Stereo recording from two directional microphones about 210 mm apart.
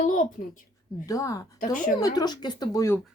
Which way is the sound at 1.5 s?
40° left (ahead or behind).